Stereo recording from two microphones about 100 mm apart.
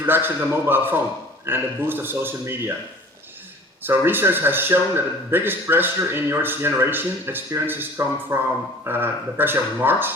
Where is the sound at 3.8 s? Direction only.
20° right (ahead or behind).